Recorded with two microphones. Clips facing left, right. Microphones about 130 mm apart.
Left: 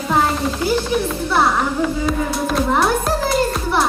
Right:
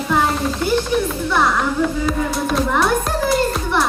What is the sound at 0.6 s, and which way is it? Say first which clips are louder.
Speech: right 1 dB; 5° left (ahead or behind).